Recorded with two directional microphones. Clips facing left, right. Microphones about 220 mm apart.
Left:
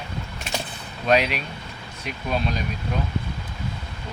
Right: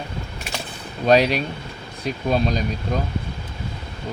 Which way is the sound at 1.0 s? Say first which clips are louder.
Right 5 dB; 35° right (ahead or behind).